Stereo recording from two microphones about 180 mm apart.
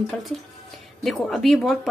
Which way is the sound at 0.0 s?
Centre (ahead or behind).